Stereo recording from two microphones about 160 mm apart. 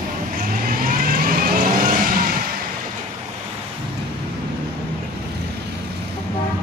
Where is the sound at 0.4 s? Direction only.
65° right (ahead or behind).